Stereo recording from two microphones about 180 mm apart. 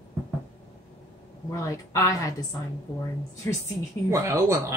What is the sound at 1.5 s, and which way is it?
Speech, 15° left (ahead or behind).